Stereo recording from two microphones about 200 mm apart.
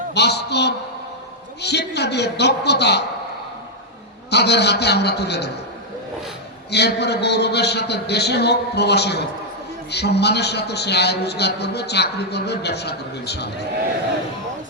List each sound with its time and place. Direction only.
0.1 s a man's voice: 55° left (ahead or behind)
4.3 s a man's voice: 55° left (ahead or behind)
6.7 s a man's voice: 55° left (ahead or behind)